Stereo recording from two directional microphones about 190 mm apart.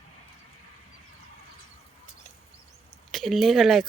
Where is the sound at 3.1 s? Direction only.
Centre (ahead or behind).